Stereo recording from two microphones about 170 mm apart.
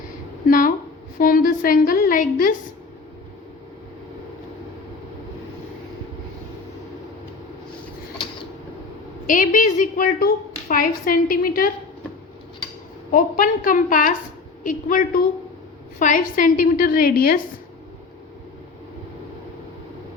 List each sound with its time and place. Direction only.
0.4 s a sound: 55° left (ahead or behind)
1.2 s a woman's voice: 55° left (ahead or behind)
9.2 s a woman's voice: 50° left (ahead or behind)
13.1 s a woman's voice: 55° left (ahead or behind)